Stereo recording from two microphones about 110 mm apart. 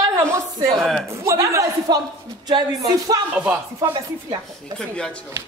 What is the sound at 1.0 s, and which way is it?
Speech, 25° right (ahead or behind).